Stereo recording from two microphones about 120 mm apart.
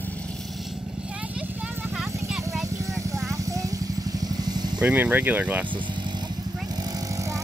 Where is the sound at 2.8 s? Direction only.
25° right (ahead or behind).